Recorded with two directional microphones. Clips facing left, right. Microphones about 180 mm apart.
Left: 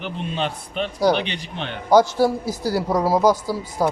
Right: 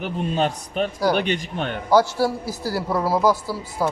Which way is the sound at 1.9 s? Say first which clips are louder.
Left 3 dB; 15° left (ahead or behind).